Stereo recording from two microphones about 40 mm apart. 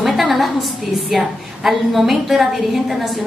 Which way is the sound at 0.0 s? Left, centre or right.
Centre.